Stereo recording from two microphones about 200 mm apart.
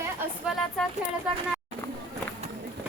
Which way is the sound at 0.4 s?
5° right (ahead or behind).